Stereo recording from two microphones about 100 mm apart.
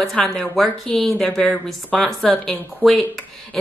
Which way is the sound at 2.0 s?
5° left (ahead or behind).